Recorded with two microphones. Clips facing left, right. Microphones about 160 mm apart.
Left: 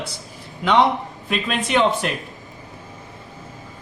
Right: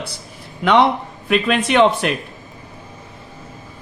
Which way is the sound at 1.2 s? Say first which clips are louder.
Right 7 dB; 70° right (ahead or behind).